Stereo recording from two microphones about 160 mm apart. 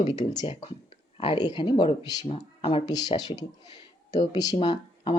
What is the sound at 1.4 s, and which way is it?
Speech, 30° left (ahead or behind).